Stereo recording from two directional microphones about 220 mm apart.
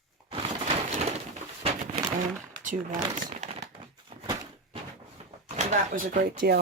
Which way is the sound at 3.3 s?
30° right (ahead or behind).